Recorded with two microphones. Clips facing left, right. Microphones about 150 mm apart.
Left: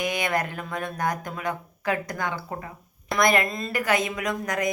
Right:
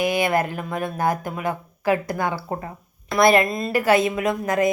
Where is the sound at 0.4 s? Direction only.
20° right (ahead or behind).